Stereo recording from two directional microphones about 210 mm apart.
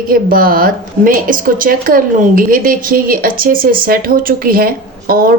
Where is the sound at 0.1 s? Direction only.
45° right (ahead or behind).